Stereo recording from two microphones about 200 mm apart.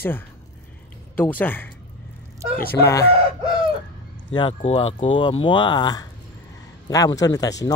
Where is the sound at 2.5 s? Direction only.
50° left (ahead or behind).